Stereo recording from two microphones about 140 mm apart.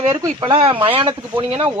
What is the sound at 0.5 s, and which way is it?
Speech, 40° right (ahead or behind).